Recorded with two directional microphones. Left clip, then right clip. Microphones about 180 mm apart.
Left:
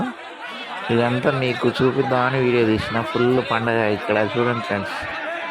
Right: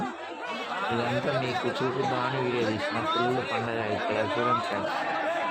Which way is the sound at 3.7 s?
45° left (ahead or behind).